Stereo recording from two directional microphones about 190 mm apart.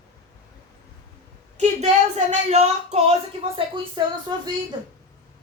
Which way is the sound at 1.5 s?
35° right (ahead or behind).